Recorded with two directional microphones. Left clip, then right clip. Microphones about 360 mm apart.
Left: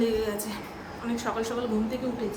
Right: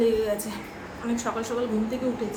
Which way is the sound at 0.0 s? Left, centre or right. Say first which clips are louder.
Right 4 dB; centre.